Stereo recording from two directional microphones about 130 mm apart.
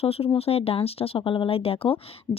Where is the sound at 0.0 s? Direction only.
50° left (ahead or behind).